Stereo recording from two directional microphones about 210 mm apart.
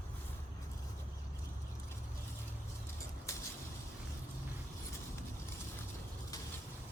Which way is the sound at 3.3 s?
15° left (ahead or behind).